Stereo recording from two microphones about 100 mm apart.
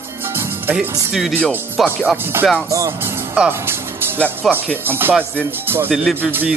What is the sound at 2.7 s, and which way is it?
Speech, 30° right (ahead or behind).